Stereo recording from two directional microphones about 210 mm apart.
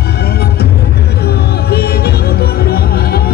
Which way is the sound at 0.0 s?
50° left (ahead or behind).